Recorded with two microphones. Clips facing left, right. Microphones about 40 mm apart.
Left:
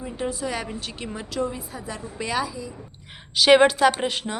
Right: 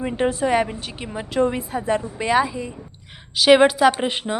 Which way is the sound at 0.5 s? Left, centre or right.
Right.